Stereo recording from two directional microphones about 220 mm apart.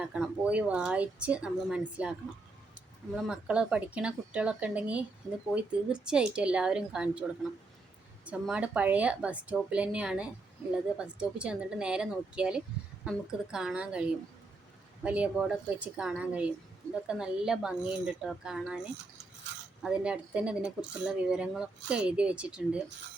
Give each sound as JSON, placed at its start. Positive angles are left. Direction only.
{"t": 0.0, "sound": "a woman's voice", "side_deg": -5}
{"t": 3.2, "sound": "a woman's voice", "side_deg": -5}
{"t": 15.0, "sound": "a woman's voice", "side_deg": -5}
{"t": 19.8, "sound": "a woman's voice", "side_deg": -5}